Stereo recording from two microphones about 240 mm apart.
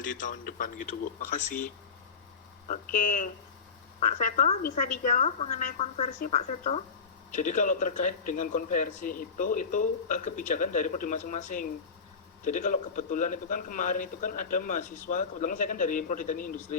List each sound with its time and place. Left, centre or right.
0.0 s a woman's voice: left